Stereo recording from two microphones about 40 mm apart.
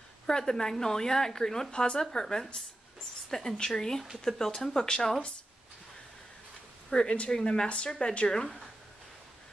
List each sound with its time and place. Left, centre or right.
0.3 s a woman's voice: centre
6.9 s speech: left